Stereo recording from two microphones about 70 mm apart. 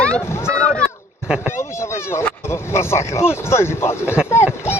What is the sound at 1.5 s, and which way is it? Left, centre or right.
Speech, left.